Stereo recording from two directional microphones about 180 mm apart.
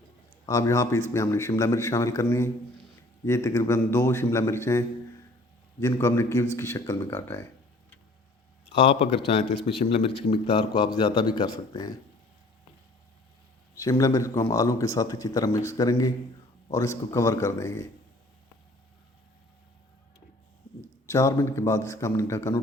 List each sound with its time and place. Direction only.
0.4 s a man's voice: 15° left (ahead or behind)
8.7 s a man's voice: 30° left (ahead or behind)
13.7 s a man's voice: 20° left (ahead or behind)
21.1 s a man's voice: 15° left (ahead or behind)